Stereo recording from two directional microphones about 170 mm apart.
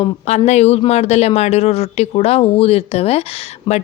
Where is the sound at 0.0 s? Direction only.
40° left (ahead or behind).